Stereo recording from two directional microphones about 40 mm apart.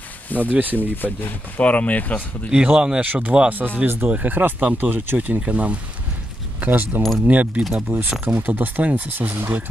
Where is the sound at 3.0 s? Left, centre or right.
Right.